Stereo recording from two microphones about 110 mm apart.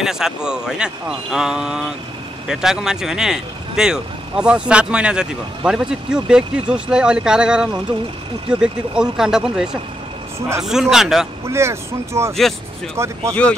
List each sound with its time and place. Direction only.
0.0 s a man's voice: 5° right (ahead or behind)
11.4 s speech: 25° right (ahead or behind)
13.3 s speech: 10° left (ahead or behind)